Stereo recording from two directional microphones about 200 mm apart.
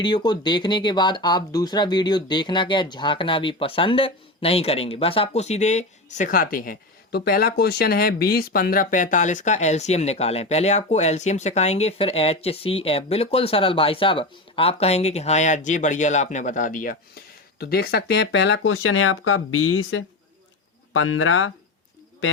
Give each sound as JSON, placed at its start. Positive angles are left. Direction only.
{"t": 0.0, "sound": "speech", "side_deg": 25}